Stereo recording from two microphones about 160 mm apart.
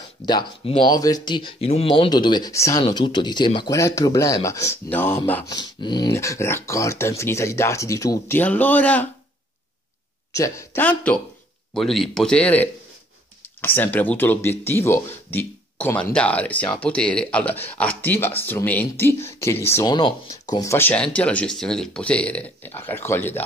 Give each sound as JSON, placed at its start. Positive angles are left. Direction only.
{"t": 0.3, "sound": "speech", "side_deg": 30}
{"t": 5.6, "sound": "speech", "side_deg": 25}
{"t": 6.1, "sound": "speech", "side_deg": 15}
{"t": 10.3, "sound": "speech", "side_deg": 20}